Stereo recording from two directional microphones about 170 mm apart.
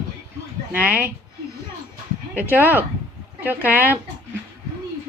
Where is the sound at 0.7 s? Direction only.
10° right (ahead or behind).